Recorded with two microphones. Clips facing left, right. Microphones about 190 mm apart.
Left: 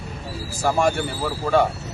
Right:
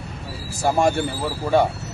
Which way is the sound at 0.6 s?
15° right (ahead or behind).